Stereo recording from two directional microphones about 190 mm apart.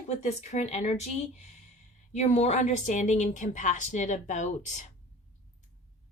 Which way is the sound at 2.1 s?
35° left (ahead or behind).